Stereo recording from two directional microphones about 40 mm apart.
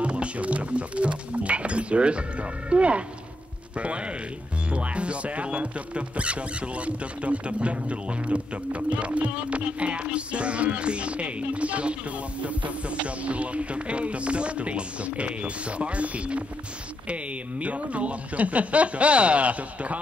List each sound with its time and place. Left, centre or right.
0.0 s speech: right